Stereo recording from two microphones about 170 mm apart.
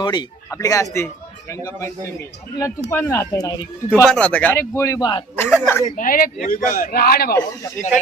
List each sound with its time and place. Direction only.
0.0 s a man's voice: 25° left (ahead or behind)
4.1 s speech: 5° left (ahead or behind); by 5.2 s 25° left (ahead or behind)
5.4 s speech: 10° left (ahead or behind)
6.0 s a man's voice: 55° left (ahead or behind)